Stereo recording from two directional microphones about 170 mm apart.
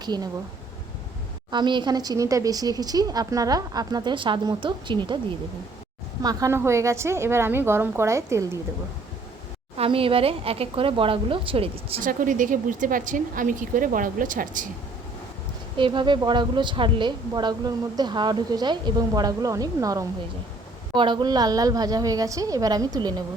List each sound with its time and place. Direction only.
0.0 s speech: 25° right (ahead or behind)
1.5 s a woman's voice: 25° right (ahead or behind)
6.2 s a woman's voice: 15° right (ahead or behind)
9.7 s speech: 35° right (ahead or behind)
12.0 s a woman's voice: 50° right (ahead or behind)
15.8 s a woman's voice: 25° right (ahead or behind)